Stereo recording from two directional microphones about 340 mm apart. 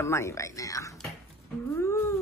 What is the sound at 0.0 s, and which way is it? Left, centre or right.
Speech, centre.